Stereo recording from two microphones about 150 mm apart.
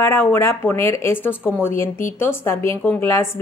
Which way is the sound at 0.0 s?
15° left (ahead or behind).